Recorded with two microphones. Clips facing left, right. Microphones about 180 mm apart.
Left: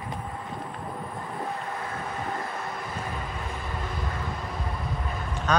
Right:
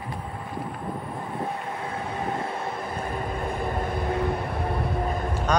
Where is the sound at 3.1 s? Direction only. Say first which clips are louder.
Right 6 dB; 55° right (ahead or behind).